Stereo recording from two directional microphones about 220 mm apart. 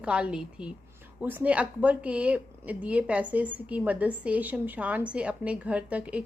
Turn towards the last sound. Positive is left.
turn(degrees=-5)  # may be behind; listen again after turning